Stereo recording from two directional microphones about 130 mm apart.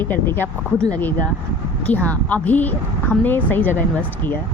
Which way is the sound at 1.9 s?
10° left (ahead or behind).